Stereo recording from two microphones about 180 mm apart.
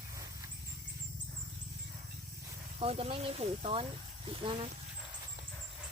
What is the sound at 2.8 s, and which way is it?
Speech, 35° right (ahead or behind).